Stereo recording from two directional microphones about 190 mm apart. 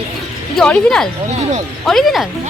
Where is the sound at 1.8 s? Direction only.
Centre (ahead or behind).